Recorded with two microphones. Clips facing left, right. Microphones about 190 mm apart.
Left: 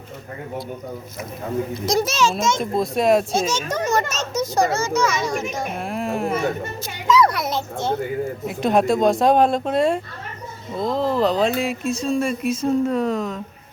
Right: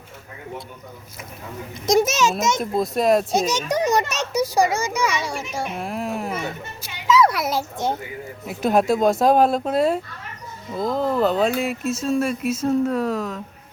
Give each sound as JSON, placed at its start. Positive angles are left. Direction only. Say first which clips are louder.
{"t": 1.9, "sound": "a child's voice", "louder": "right 3 dB", "side_deg": -20}
{"t": 2.6, "sound": "speech", "louder": "left 1 dB", "side_deg": 0}
{"t": 3.3, "sound": "speech", "louder": "right 1 dB", "side_deg": -15}
{"t": 6.3, "sound": "speech", "louder": "left 6 dB", "side_deg": 50}
{"t": 7.1, "sound": "a child's voice", "louder": "even", "side_deg": -5}